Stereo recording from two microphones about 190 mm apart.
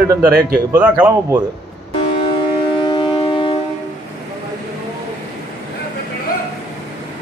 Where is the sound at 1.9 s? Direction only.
30° left (ahead or behind).